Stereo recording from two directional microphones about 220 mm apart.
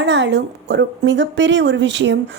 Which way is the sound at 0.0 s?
55° right (ahead or behind).